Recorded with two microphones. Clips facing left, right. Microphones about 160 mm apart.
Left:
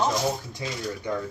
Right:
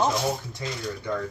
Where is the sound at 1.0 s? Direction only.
15° left (ahead or behind).